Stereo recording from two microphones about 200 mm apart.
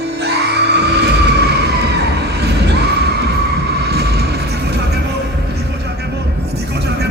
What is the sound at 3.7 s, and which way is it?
Vehicle, 55° right (ahead or behind).